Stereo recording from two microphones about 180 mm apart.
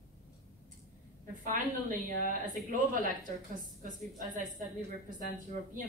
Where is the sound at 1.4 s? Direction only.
45° right (ahead or behind).